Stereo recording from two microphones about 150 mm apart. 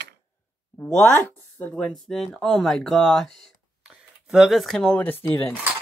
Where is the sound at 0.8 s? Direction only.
15° left (ahead or behind).